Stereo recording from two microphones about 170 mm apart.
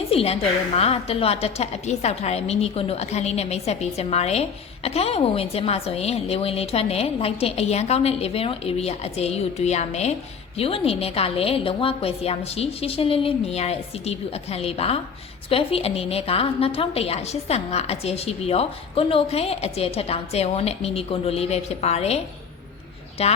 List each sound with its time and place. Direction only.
0.1 s a woman's voice: 35° left (ahead or behind)